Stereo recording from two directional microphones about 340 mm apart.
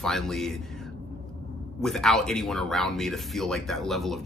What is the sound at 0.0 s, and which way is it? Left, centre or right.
Speech, centre.